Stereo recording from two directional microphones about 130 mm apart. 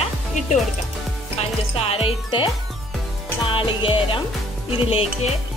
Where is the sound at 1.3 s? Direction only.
50° left (ahead or behind).